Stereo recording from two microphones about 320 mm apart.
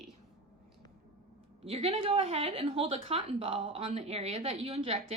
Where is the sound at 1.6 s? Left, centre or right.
Centre.